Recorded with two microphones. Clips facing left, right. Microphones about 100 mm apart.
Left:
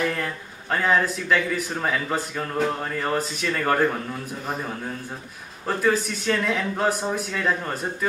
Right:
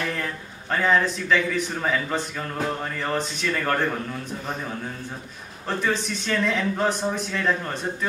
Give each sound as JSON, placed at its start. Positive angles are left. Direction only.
{"t": 0.1, "sound": "a man's voice", "side_deg": 5}
{"t": 5.7, "sound": "a man's voice", "side_deg": 5}